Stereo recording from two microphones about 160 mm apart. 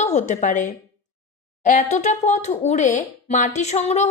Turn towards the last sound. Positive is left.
turn(degrees=45)  # may be behind; listen again after turning